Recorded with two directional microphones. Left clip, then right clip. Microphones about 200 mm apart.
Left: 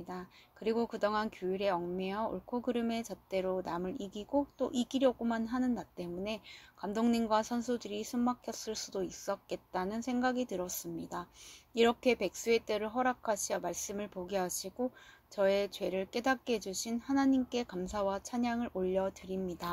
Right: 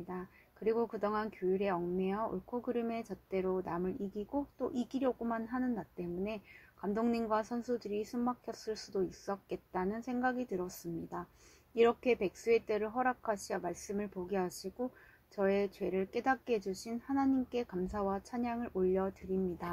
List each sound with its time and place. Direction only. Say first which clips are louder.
0.1 s speech: even; 30° left (ahead or behind)